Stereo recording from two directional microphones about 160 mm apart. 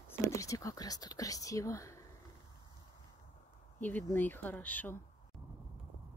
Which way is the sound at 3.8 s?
10° left (ahead or behind).